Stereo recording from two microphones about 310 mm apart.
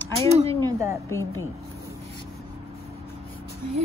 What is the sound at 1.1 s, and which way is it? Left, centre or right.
Speech, centre.